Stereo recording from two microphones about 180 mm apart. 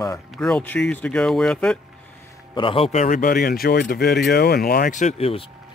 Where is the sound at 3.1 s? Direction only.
50° left (ahead or behind); by 5.4 s 35° left (ahead or behind).